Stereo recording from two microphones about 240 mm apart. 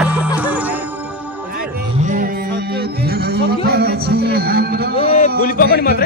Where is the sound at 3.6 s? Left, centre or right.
Right.